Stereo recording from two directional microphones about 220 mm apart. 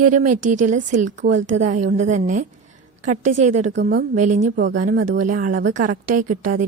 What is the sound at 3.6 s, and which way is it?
Speech, 55° right (ahead or behind).